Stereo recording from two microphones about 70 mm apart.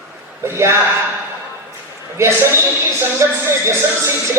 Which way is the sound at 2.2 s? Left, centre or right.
Right.